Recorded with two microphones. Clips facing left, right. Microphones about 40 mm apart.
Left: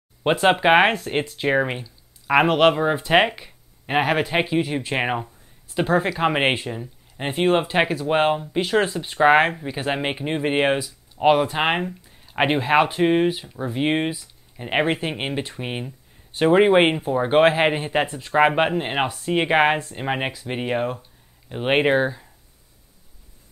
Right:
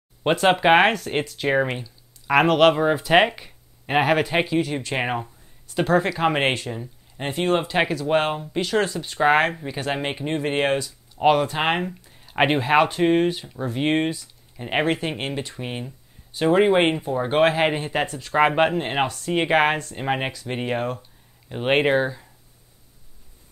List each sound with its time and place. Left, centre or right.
0.2 s speech: centre
4.5 s speech: centre
16.3 s a sound: left
16.5 s speech: left